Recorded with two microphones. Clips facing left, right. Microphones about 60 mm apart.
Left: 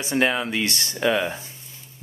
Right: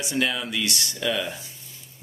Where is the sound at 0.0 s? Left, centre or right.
Left.